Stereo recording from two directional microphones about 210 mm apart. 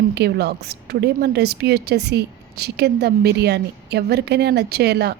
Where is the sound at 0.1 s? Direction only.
50° right (ahead or behind).